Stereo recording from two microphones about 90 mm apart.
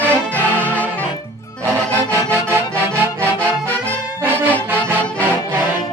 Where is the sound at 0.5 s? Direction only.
20° left (ahead or behind).